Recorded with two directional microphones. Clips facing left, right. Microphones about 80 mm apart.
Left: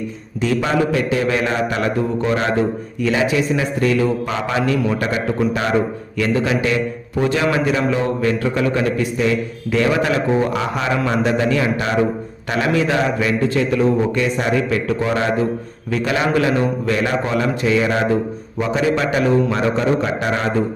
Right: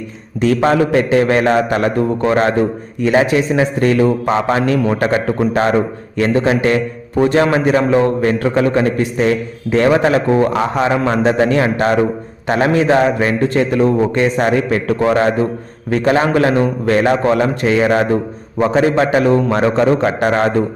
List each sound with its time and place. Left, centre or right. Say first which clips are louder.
0.4 s a man's voice: right 5 dB; right